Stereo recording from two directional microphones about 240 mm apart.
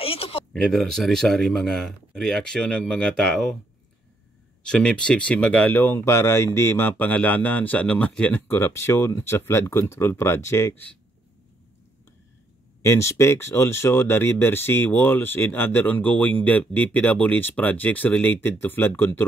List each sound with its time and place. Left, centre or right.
0.0 s a sound: left
0.5 s speech: centre
4.6 s speech: centre
12.8 s speech: centre